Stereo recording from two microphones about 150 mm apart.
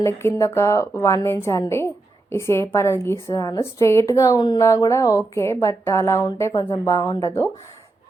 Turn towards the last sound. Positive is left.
turn(degrees=20)  # may be behind; listen again after turning